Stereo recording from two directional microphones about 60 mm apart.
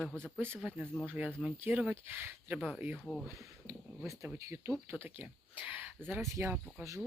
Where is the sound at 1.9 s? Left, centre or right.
Right.